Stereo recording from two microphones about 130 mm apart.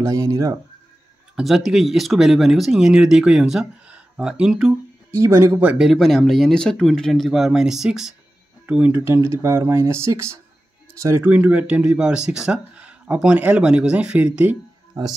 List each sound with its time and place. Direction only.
0.0 s speech: 25° right (ahead or behind)
1.3 s speech: centre (ahead or behind)
5.1 s speech: 20° right (ahead or behind)
5.6 s speech: 5° right (ahead or behind)
15.0 s speech: 30° right (ahead or behind)